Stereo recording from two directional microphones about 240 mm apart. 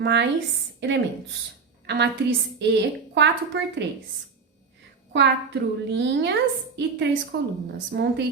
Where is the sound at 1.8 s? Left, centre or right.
Right.